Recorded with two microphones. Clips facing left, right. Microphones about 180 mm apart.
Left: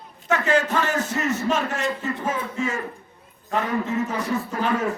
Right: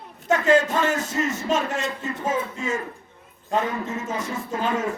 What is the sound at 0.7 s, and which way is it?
A man's voice, 25° right (ahead or behind).